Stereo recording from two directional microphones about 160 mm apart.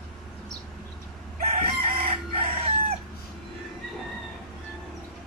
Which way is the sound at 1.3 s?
45° right (ahead or behind).